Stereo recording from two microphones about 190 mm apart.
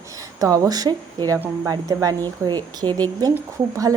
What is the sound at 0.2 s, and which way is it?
A woman's voice, 15° right (ahead or behind).